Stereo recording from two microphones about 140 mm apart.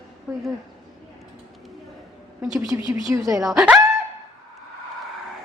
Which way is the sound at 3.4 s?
5° right (ahead or behind).